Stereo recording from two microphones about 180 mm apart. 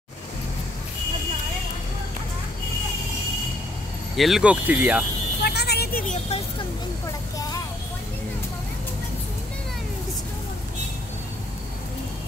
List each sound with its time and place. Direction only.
4.2 s speech: 5° right (ahead or behind)
5.4 s vehicle: 65° left (ahead or behind)